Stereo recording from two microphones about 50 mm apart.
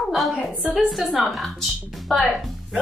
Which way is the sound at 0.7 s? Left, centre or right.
Centre.